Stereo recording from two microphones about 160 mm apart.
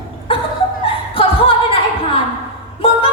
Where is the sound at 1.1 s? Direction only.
35° left (ahead or behind).